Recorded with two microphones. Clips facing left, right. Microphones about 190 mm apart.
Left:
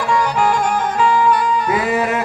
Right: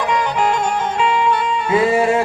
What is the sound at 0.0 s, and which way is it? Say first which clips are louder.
Music: left 1 dB; 20° right (ahead or behind).